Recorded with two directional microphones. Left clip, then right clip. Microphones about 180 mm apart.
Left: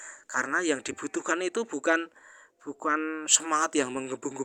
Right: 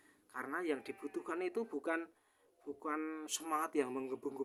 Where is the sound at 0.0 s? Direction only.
35° left (ahead or behind).